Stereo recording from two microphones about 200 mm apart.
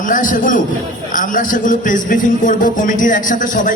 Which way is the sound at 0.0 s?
40° left (ahead or behind).